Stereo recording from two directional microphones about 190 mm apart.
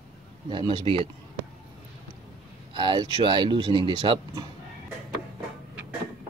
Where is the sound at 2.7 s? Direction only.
25° right (ahead or behind).